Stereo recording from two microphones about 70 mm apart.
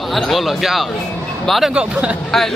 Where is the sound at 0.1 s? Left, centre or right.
Centre.